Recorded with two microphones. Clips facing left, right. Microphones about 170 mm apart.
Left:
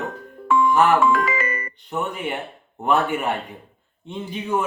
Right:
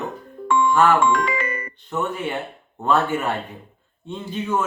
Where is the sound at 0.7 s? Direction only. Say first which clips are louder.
Right 1 dB; 15° left (ahead or behind).